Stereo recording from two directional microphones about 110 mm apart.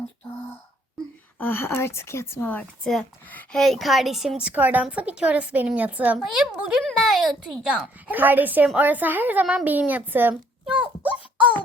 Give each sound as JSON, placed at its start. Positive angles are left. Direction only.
{"t": 1.4, "sound": "a woman's voice", "side_deg": 20}
{"t": 3.5, "sound": "a woman's voice", "side_deg": 0}